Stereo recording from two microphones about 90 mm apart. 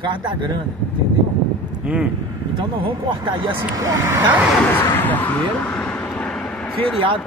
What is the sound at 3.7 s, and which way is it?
Speech, 35° right (ahead or behind).